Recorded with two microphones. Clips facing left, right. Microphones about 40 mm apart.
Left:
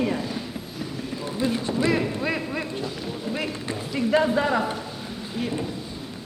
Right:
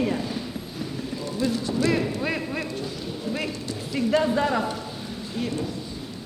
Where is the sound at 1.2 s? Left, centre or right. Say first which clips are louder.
Left 1 dB; left.